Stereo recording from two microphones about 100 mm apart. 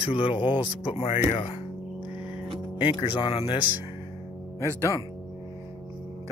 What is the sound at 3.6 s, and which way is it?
Speech, 20° right (ahead or behind).